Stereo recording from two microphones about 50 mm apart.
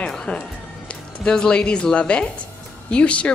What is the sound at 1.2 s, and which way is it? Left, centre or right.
A woman's voice, centre.